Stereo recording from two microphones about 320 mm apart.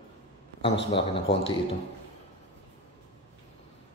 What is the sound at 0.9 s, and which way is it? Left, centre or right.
Speech, centre.